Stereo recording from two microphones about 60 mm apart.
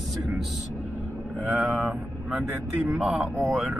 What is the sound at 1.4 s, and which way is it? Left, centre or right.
Speech, centre.